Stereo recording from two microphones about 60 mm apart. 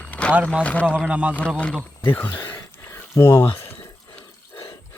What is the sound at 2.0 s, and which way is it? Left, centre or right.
Speech, left.